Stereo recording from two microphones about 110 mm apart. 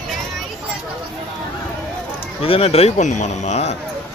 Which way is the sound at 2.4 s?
60° left (ahead or behind).